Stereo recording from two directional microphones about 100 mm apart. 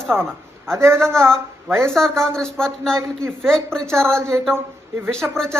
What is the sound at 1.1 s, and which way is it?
Speech, 5° left (ahead or behind).